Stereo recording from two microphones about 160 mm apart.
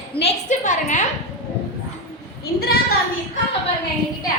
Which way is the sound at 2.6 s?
75° left (ahead or behind).